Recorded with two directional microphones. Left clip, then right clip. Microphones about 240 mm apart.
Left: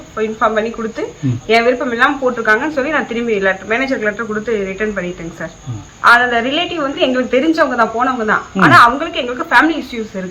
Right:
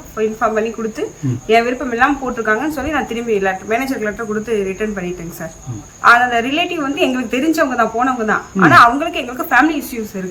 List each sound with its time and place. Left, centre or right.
0.2 s a woman's voice: centre